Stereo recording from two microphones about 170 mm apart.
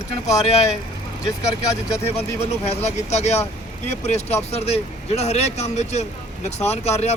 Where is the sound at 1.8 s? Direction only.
15° left (ahead or behind).